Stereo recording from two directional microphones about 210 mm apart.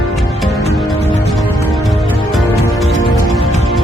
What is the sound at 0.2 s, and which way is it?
Music, centre (ahead or behind).